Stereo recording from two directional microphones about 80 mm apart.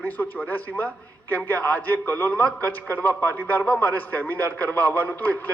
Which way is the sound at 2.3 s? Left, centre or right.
Centre.